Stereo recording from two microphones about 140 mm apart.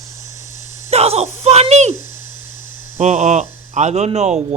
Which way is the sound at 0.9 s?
50° right (ahead or behind).